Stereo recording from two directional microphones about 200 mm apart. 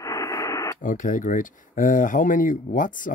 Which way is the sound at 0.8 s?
40° left (ahead or behind).